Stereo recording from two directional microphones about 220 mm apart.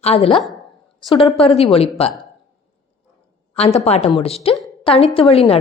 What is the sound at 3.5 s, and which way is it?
Speech, 30° left (ahead or behind).